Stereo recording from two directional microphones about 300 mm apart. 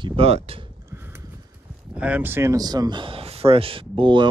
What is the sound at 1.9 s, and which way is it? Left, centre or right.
Speech, centre.